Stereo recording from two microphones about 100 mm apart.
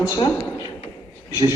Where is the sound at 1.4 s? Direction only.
55° left (ahead or behind).